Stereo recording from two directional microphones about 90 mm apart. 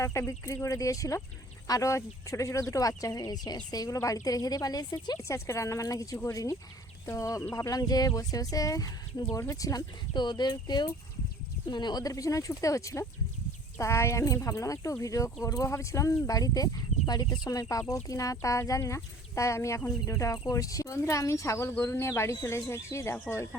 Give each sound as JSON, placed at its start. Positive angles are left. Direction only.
{"t": 0.0, "sound": "a woman's voice", "side_deg": 30}
{"t": 5.1, "sound": "speech", "side_deg": 35}
{"t": 10.1, "sound": "a woman's voice", "side_deg": 55}